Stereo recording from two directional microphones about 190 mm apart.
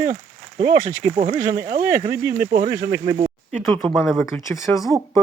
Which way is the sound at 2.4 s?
50° right (ahead or behind).